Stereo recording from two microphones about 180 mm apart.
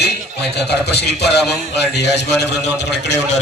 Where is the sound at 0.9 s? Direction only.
65° left (ahead or behind).